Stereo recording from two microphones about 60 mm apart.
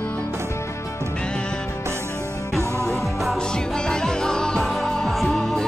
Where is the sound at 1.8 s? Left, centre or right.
Right.